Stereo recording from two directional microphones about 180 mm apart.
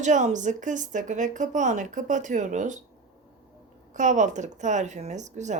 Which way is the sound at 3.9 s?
45° right (ahead or behind).